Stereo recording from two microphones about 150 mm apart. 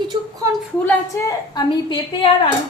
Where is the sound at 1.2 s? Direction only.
25° left (ahead or behind).